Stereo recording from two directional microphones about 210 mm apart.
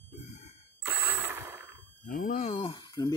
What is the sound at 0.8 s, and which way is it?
Ratchet, 10° right (ahead or behind).